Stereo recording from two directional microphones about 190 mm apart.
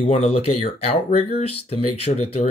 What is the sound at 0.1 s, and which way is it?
Speech, 35° left (ahead or behind).